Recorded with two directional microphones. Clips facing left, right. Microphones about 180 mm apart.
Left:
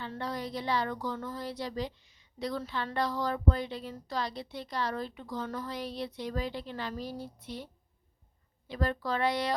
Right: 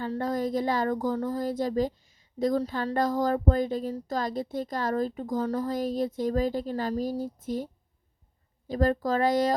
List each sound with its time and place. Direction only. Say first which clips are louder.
0.0 s speech: right 8 dB; 45° right (ahead or behind)